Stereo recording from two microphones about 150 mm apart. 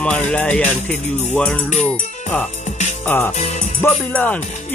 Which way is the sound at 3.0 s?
15° left (ahead or behind).